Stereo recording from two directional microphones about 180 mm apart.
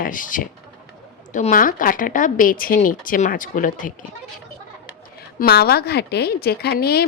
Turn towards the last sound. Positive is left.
turn(degrees=60)  # may be behind; listen again after turning